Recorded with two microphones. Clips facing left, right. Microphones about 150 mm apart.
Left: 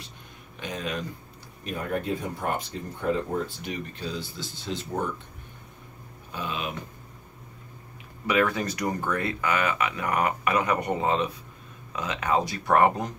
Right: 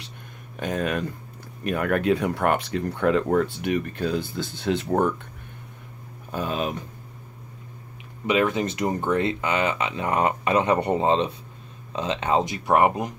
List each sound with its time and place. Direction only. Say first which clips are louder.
0.6 s speech: right 6 dB; 50° right (ahead or behind)
1.6 s speech: right 7 dB; 65° right (ahead or behind)
6.3 s speech: right 6 dB; 40° right (ahead or behind)
8.3 s speech: right 2 dB; 20° right (ahead or behind)